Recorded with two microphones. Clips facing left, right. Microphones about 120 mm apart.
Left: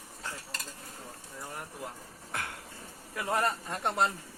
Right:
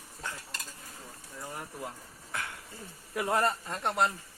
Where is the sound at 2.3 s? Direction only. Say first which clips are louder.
Even; 55° left (ahead or behind).